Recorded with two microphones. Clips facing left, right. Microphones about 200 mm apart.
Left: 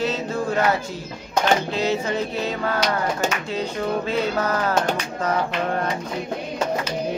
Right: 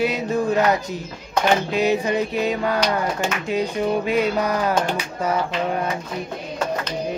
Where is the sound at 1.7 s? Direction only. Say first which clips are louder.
Right 3 dB; 15° right (ahead or behind).